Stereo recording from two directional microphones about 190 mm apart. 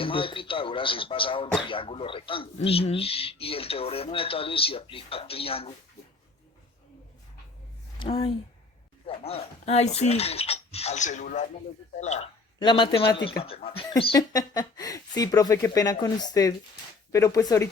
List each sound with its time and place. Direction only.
0.0 s speech: 30° left (ahead or behind)
7.9 s speech: 25° left (ahead or behind)
12.5 s speech: 25° left (ahead or behind)
13.9 s speech: 20° left (ahead or behind)